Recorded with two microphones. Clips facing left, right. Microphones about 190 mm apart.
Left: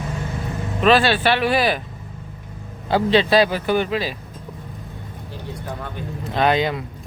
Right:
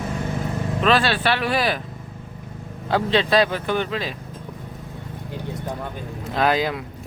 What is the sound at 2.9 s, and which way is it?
Speech, centre (ahead or behind).